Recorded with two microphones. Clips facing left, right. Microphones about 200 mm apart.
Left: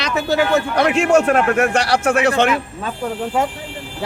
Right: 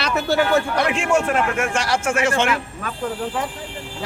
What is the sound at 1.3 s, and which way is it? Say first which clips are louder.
Speech: left 5 dB; 65° left (ahead or behind).